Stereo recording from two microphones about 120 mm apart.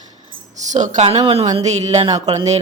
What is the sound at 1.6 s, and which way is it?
Speech, 70° right (ahead or behind).